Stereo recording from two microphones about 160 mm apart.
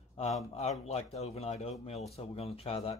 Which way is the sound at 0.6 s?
40° left (ahead or behind).